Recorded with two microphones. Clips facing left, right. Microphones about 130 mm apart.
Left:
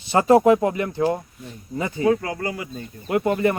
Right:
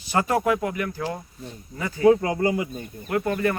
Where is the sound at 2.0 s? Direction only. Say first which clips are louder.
Right 4 dB; 25° right (ahead or behind).